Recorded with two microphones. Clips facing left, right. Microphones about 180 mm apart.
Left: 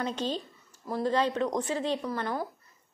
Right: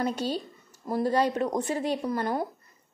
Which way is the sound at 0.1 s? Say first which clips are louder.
Right 2 dB; 10° right (ahead or behind).